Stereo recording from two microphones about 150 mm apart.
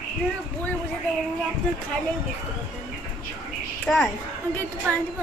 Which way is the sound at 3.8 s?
5° left (ahead or behind).